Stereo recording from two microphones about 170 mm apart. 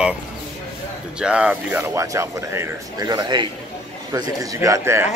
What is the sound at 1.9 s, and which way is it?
A man's voice, 20° right (ahead or behind).